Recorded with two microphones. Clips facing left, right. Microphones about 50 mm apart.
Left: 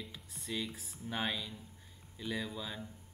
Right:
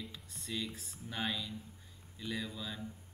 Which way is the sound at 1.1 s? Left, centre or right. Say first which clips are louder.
Left 1 dB; centre.